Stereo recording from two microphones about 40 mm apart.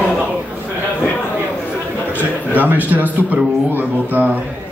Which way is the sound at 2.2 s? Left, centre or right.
Right.